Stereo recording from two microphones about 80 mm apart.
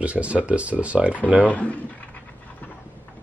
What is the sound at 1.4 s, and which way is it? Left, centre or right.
Speech, centre.